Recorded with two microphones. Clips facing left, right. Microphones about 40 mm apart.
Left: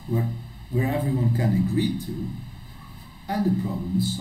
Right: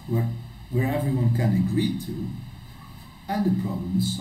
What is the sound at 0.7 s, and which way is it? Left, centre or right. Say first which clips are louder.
Speech: even; centre.